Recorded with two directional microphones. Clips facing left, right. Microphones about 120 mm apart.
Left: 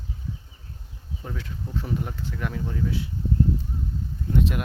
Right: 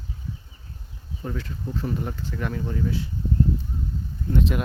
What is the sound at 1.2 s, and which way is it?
Speech, centre (ahead or behind).